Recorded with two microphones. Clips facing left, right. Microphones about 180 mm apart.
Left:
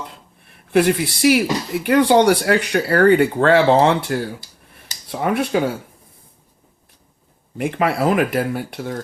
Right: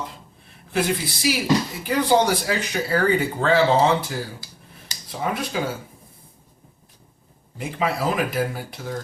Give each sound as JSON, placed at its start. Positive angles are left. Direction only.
{"t": 0.7, "sound": "speech", "side_deg": 65}
{"t": 5.2, "sound": "speech", "side_deg": 65}
{"t": 7.6, "sound": "speech", "side_deg": 65}